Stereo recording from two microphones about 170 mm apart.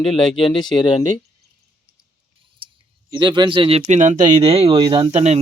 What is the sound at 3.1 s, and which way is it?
Speech, 25° right (ahead or behind).